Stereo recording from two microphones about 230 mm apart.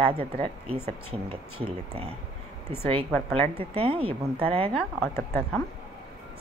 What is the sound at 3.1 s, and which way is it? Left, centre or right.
Speech, centre.